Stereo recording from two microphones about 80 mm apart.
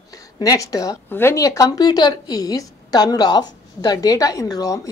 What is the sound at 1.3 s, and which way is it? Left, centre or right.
A woman's voice, left.